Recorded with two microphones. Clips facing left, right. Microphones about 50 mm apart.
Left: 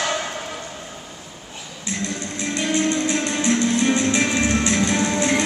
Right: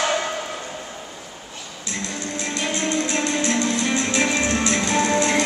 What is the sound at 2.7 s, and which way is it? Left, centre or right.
Music, left.